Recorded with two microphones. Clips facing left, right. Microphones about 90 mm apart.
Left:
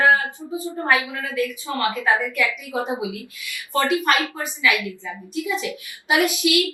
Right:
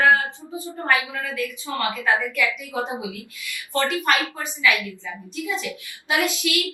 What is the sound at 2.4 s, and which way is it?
Speech, 20° right (ahead or behind).